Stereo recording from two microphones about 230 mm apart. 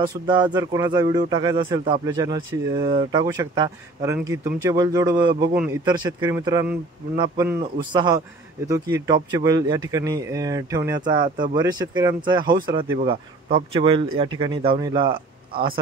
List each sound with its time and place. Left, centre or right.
0.0 s a man's voice: centre